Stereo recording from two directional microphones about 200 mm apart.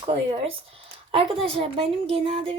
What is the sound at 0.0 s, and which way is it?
Speech, 25° right (ahead or behind).